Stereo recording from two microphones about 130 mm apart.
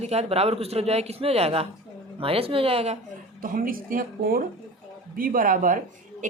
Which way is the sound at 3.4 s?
90° right.